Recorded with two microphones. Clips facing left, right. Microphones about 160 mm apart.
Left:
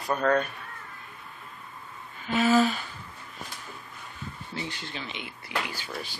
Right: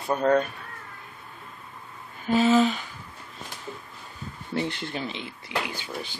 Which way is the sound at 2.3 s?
25° right (ahead or behind).